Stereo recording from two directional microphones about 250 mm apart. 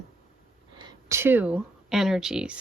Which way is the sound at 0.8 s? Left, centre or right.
Centre.